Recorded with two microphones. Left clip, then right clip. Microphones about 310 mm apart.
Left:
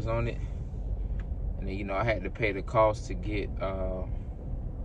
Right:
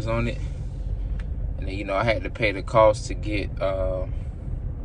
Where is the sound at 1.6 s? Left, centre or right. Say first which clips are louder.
Right 6 dB; centre.